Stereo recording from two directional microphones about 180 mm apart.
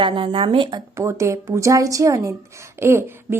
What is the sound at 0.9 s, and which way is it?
A woman's voice, 15° right (ahead or behind).